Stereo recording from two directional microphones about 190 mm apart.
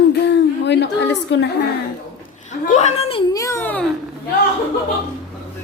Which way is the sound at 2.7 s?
35° left (ahead or behind).